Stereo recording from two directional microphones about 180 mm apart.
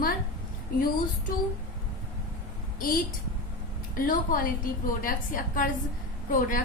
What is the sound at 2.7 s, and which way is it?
A woman's voice, 50° left (ahead or behind).